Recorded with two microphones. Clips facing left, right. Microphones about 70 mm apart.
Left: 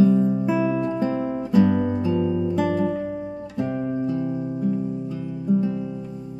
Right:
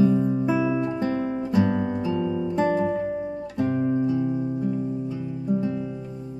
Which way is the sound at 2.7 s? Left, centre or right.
Centre.